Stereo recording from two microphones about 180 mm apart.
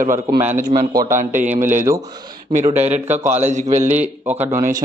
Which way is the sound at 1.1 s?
45° right (ahead or behind).